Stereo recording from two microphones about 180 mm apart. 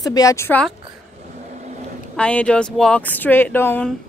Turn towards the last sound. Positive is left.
turn(degrees=10)  # may be behind; listen again after turning